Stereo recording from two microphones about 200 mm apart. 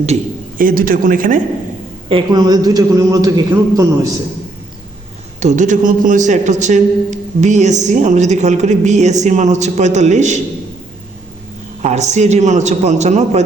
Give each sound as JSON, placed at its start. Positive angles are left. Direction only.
{"t": 0.6, "sound": "speech", "side_deg": -45}
{"t": 2.0, "sound": "a man's voice", "side_deg": -25}
{"t": 5.4, "sound": "a man's voice", "side_deg": -35}
{"t": 11.8, "sound": "a man's voice", "side_deg": -35}